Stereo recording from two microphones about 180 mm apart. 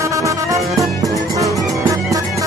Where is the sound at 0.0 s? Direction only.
15° right (ahead or behind).